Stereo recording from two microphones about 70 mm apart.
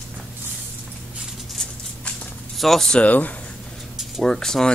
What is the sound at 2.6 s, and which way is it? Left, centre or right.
Speech, centre.